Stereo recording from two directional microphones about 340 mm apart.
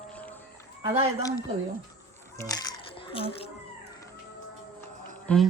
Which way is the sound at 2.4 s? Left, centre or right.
Centre.